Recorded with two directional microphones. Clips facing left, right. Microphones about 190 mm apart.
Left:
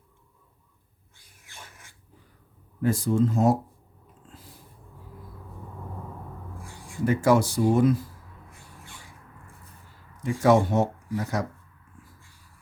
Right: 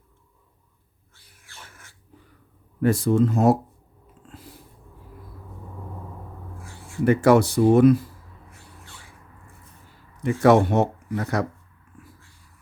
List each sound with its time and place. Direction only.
1.1 s a sound: 15° left (ahead or behind)
2.8 s speech: 70° right (ahead or behind)
7.0 s speech: 65° right (ahead or behind)
10.2 s speech: 65° right (ahead or behind)